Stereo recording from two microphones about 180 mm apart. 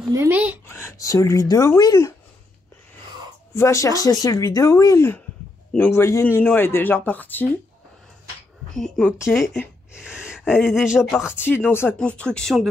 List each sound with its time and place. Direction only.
0.1 s speech: 15° right (ahead or behind)
0.7 s a man's voice: 15° left (ahead or behind)
3.5 s a man's voice: 15° left (ahead or behind)
8.7 s speech: centre (ahead or behind)
11.4 s a man's voice: 10° left (ahead or behind)